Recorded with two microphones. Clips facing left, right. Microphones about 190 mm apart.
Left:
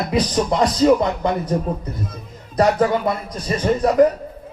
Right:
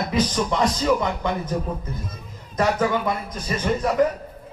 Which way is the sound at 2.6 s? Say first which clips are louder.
Left 5 dB; 35° left (ahead or behind).